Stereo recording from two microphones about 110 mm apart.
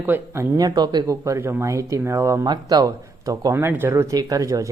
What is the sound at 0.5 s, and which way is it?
Speech, 35° right (ahead or behind).